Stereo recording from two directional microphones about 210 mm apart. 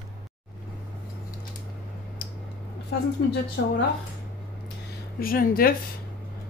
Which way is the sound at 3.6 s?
55° left (ahead or behind).